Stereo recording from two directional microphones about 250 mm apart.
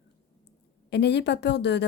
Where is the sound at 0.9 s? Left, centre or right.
Left.